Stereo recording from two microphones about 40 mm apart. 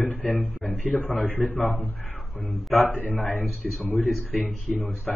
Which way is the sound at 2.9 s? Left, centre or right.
Left.